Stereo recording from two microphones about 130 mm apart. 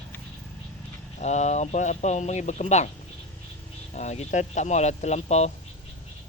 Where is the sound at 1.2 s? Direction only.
60° left (ahead or behind).